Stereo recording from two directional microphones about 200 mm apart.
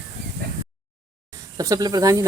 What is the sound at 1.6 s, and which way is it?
Speech, 15° right (ahead or behind).